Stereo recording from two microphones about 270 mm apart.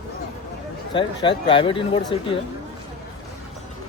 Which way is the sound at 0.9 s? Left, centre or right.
Centre.